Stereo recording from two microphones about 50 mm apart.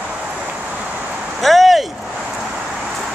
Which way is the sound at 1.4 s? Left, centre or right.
Centre.